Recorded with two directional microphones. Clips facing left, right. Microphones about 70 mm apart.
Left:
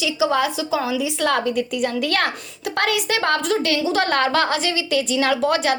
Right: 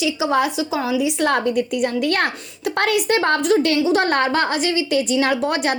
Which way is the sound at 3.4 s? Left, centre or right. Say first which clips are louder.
Right 4 dB; centre.